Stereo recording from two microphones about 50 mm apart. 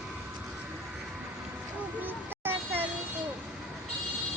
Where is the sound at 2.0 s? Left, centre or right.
Right.